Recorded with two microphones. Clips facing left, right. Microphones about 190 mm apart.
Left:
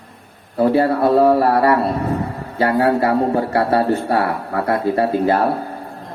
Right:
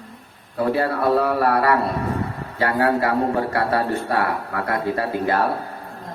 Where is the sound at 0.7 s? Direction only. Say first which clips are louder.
Left 4 dB; 25° left (ahead or behind).